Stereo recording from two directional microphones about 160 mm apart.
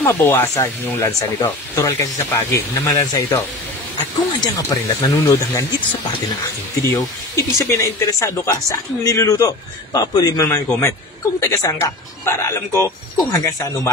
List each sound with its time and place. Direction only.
0.0 s speech: 15° left (ahead or behind)
6.8 s speech: 20° left (ahead or behind)